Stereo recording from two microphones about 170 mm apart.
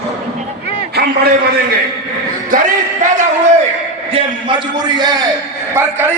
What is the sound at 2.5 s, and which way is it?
Speech, 50° right (ahead or behind).